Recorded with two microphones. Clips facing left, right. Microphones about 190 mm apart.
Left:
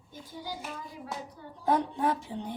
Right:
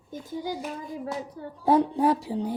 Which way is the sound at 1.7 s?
35° right (ahead or behind).